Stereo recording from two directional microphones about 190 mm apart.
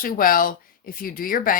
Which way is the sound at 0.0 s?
45° left (ahead or behind).